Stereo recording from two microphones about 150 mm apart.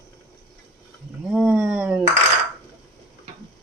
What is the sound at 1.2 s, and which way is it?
Roaring cats, 5° right (ahead or behind).